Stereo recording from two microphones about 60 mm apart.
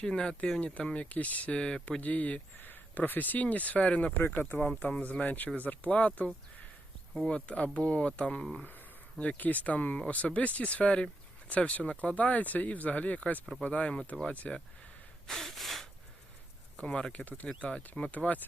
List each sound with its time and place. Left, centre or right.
0.0 s speech: centre
2.0 s speech: left
15.3 s gasp: centre
16.7 s speech: centre